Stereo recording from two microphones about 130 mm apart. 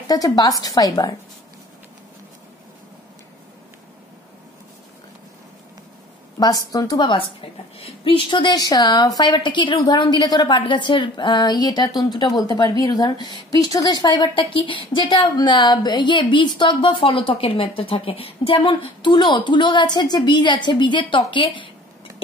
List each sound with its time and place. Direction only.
0.1 s speech: 30° left (ahead or behind)
6.4 s a woman's voice: 30° left (ahead or behind)